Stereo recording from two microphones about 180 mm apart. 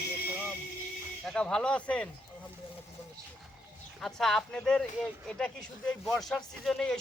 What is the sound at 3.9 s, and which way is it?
Speech, centre (ahead or behind).